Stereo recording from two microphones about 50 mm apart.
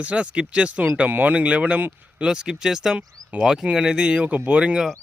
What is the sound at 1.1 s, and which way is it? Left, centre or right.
Speech, right.